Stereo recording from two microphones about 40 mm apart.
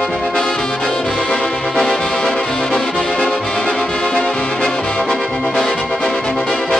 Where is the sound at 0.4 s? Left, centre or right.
Centre.